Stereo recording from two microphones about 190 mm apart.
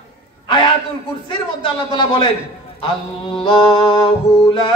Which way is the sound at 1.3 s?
25° left (ahead or behind).